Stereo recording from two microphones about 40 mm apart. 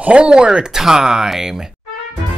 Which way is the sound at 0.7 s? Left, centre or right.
Centre.